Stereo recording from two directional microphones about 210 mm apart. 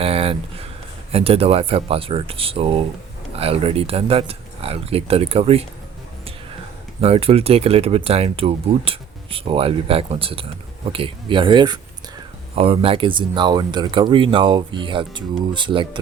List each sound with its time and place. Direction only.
0.0 s a sound: 25° right (ahead or behind)
1.1 s speech: 25° right (ahead or behind)
7.0 s speech: 25° right (ahead or behind)